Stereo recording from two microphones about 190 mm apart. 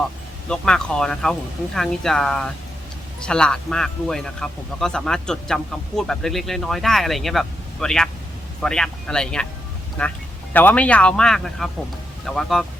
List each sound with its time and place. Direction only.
0.4 s a man's voice: 5° left (ahead or behind)